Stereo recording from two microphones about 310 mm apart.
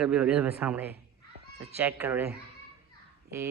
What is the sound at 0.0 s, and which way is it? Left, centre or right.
A man's voice, centre.